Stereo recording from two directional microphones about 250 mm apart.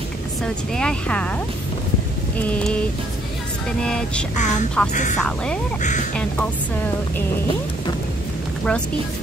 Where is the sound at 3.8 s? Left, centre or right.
Centre.